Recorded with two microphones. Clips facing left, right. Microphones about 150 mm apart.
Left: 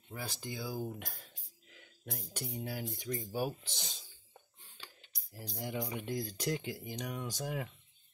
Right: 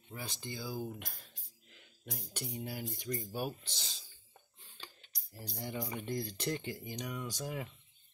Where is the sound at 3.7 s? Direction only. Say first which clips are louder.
Left 3 dB; 15° left (ahead or behind).